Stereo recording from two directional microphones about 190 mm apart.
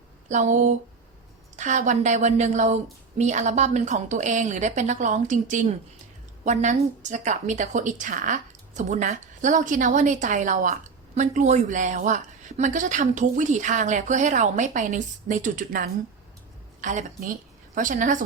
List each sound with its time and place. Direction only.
0.3 s a woman's voice: 40° right (ahead or behind)